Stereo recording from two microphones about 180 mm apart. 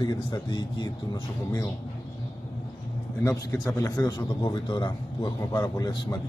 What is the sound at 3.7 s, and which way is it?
Speech, 20° left (ahead or behind).